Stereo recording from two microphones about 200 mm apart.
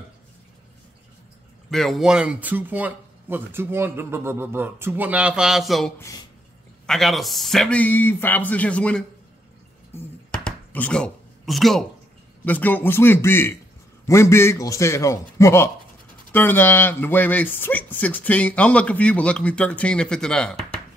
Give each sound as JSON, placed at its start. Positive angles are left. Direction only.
{"t": 1.7, "sound": "speech", "side_deg": 0}
{"t": 5.9, "sound": "speech", "side_deg": 15}
{"t": 6.9, "sound": "speech", "side_deg": 0}
{"t": 9.9, "sound": "a sound", "side_deg": 5}
{"t": 12.4, "sound": "speech", "side_deg": 10}